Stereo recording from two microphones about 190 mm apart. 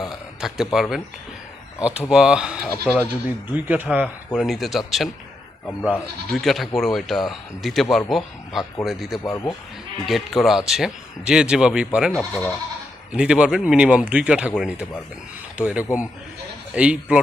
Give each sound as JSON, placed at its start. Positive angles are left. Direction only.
{"t": 0.0, "sound": "a sound", "side_deg": 0}
{"t": 1.8, "sound": "speech", "side_deg": -5}
{"t": 5.8, "sound": "speech", "side_deg": 0}
{"t": 9.2, "sound": "speech", "side_deg": 15}
{"t": 10.1, "sound": "speech", "side_deg": 0}
{"t": 13.1, "sound": "speech", "side_deg": -5}